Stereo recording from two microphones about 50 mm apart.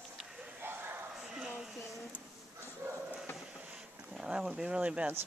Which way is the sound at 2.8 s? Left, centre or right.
Right.